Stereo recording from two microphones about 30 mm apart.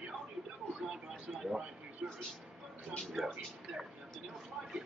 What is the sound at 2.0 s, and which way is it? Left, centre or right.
Speech, right.